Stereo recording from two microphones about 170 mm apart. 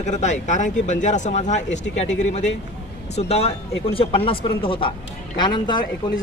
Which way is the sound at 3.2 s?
40° left (ahead or behind).